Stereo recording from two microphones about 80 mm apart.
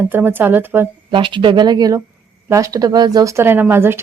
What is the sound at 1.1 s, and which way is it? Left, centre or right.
Speech, right.